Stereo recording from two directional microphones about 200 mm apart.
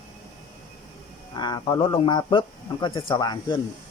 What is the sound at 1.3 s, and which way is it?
Speech, 20° left (ahead or behind).